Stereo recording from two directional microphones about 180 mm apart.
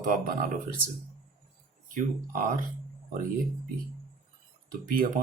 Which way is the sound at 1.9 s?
50° right (ahead or behind).